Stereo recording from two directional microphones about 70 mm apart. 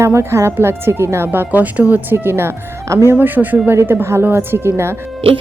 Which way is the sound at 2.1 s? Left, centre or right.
Right.